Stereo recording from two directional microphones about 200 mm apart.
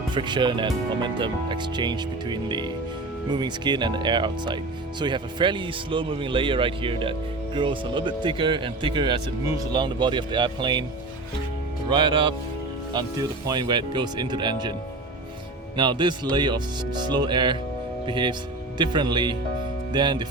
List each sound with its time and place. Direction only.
0.1 s speech: 25° right (ahead or behind)
11.9 s speech: 20° right (ahead or behind)